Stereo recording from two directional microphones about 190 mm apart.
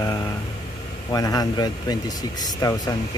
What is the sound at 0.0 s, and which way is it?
Vehicle, 20° left (ahead or behind).